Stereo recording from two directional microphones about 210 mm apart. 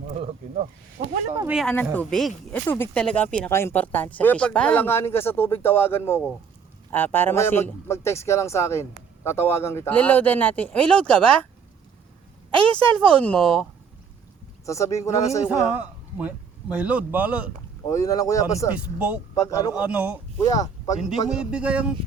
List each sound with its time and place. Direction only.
0.2 s speech: 30° right (ahead or behind)
1.0 s speech: 50° right (ahead or behind)
1.5 s a man's voice: centre (ahead or behind)
13.1 s speech: 5° left (ahead or behind)
14.7 s a man's voice: 15° left (ahead or behind)
15.4 s a man's voice: 5° right (ahead or behind)
17.8 s a man's voice: 15° left (ahead or behind)
18.9 s a man's voice: 5° right (ahead or behind)
19.3 s a man's voice: 15° left (ahead or behind)
19.7 s a man's voice: 5° right (ahead or behind)
20.6 s speech: 15° left (ahead or behind)
21.2 s speech: 5° right (ahead or behind)